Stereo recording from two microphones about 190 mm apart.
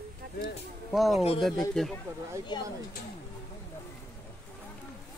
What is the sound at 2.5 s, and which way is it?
Speech, 20° left (ahead or behind).